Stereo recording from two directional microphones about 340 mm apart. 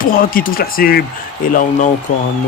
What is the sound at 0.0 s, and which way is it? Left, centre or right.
Speech, left.